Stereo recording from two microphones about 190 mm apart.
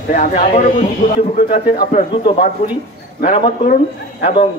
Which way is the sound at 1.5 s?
50° left (ahead or behind).